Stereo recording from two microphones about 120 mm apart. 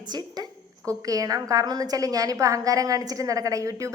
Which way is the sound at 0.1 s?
35° right (ahead or behind).